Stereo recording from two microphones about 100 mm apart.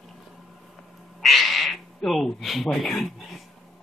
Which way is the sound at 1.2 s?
Centre (ahead or behind).